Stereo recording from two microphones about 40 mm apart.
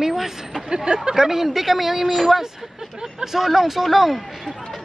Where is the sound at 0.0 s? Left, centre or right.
Centre.